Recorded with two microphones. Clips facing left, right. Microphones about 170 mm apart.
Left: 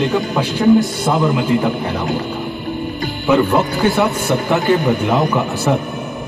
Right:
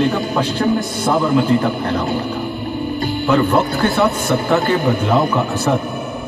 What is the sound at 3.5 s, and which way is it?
Speech, 15° left (ahead or behind).